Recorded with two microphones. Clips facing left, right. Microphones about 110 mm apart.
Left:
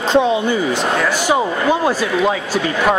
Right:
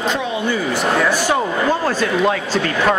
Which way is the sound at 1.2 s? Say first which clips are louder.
Left 2 dB; 10° left (ahead or behind).